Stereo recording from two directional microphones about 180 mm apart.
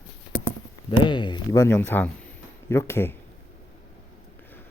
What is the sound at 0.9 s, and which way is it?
Speech, 25° left (ahead or behind).